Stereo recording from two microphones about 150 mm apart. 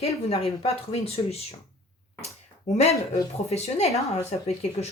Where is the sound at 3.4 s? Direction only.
45° left (ahead or behind).